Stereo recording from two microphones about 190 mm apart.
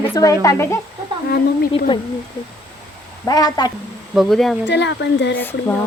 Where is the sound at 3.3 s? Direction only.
20° left (ahead or behind).